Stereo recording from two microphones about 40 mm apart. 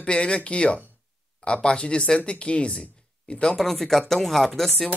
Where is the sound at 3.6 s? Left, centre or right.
Centre.